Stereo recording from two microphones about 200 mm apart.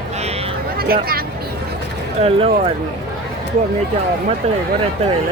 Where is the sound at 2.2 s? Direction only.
30° right (ahead or behind).